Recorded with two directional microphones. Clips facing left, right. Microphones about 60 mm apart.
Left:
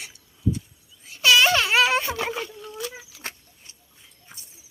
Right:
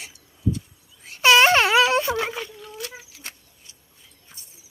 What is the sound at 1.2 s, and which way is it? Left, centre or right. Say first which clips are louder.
Wail: right 3 dB; right.